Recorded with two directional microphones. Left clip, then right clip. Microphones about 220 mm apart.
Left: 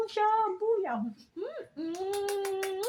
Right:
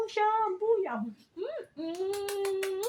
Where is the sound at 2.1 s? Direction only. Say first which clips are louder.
Left 1 dB; centre (ahead or behind).